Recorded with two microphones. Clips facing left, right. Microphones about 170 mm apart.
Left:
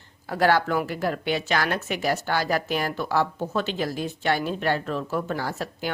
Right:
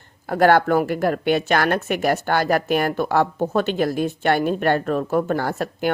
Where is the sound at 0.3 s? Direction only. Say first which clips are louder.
Right 6 dB; 55° right (ahead or behind).